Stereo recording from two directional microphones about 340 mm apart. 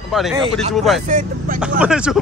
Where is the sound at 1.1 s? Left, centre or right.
Right.